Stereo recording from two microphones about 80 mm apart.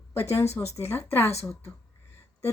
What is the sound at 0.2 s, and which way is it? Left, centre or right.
Speech, left.